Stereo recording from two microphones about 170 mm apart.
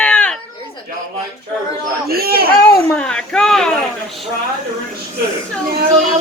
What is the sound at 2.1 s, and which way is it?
Speech, 65° right (ahead or behind).